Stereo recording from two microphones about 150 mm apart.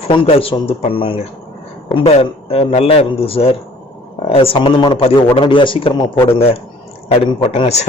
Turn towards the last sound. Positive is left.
turn(degrees=45)  # may be behind; listen again after turning